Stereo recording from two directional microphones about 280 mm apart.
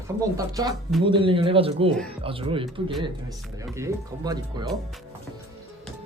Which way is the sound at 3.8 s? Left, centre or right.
Centre.